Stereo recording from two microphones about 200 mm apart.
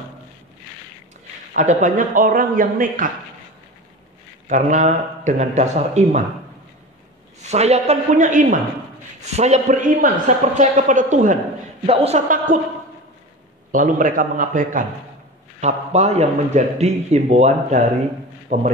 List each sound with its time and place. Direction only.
1.5 s speech: 40° right (ahead or behind)
4.5 s a man's voice: 40° right (ahead or behind)
7.4 s a man's voice: 35° right (ahead or behind)
13.7 s a man's voice: 40° right (ahead or behind)